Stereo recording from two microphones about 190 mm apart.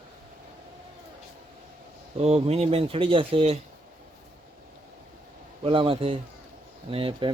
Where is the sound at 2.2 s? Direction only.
35° right (ahead or behind).